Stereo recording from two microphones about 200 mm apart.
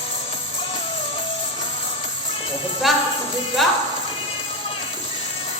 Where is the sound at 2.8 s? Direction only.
Centre (ahead or behind).